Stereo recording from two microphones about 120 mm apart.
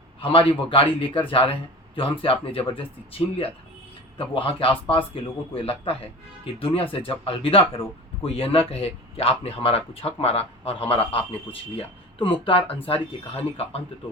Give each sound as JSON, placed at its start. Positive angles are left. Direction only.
{"t": 0.2, "sound": "speech", "side_deg": 45}